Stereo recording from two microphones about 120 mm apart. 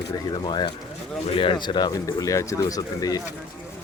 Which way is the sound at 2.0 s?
25° left (ahead or behind).